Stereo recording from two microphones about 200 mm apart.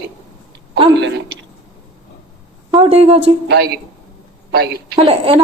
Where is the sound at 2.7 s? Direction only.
30° right (ahead or behind).